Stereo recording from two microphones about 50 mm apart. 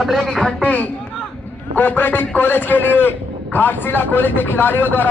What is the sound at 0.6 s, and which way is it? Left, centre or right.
Speech, left.